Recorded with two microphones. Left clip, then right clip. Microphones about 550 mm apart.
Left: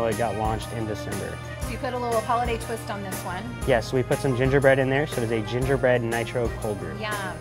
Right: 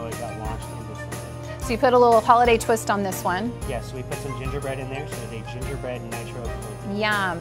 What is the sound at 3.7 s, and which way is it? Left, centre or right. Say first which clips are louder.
Speech: left 9 dB; left.